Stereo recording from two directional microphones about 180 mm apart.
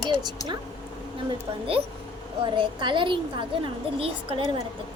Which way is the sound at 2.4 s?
25° right (ahead or behind).